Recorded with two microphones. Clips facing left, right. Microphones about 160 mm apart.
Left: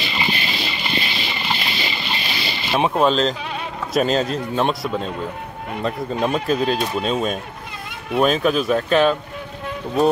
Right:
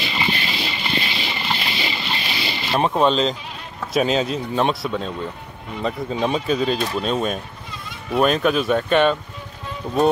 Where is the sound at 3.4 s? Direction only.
75° left (ahead or behind).